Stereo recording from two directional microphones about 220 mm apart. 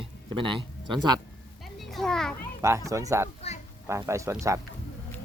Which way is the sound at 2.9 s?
15° right (ahead or behind).